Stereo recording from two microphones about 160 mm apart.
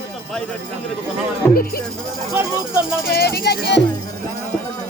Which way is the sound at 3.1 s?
75° left (ahead or behind).